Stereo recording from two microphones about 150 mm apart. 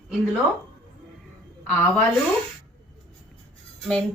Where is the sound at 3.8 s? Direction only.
5° left (ahead or behind).